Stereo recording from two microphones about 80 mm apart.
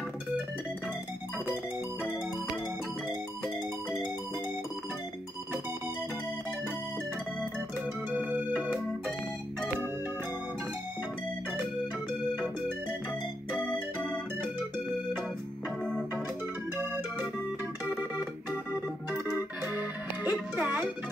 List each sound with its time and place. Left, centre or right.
3.1 s music: left
8.2 s music: centre
13.6 s music: centre
15.8 s organ: centre
19.1 s organ: right
19.8 s music: centre